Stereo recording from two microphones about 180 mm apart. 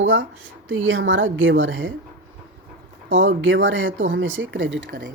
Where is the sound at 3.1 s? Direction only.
90° right.